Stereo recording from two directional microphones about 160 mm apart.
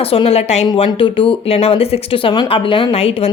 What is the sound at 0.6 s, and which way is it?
Speech, 25° left (ahead or behind).